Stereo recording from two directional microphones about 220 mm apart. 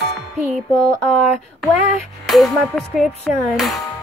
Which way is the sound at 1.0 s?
Centre (ahead or behind).